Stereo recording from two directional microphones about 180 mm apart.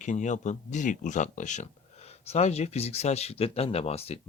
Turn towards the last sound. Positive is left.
turn(degrees=35)  # may be behind; listen again after turning